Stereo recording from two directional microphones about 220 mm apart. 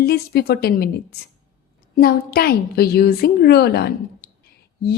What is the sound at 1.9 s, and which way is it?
A woman's voice, 40° left (ahead or behind).